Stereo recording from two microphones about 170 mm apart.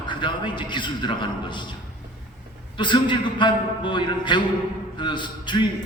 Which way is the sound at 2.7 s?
30° left (ahead or behind).